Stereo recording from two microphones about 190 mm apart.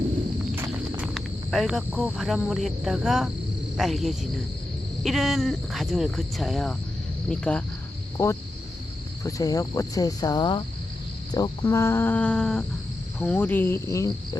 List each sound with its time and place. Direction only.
0.5 s walk: 15° right (ahead or behind)
1.0 s speech: centre (ahead or behind)
8.2 s speech: 15° left (ahead or behind)
9.2 s cricket: 20° left (ahead or behind)
11.3 s speech: 20° left (ahead or behind)